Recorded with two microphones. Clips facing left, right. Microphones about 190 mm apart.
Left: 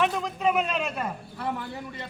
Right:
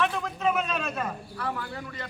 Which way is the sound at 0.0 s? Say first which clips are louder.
Left 2 dB; 10° left (ahead or behind).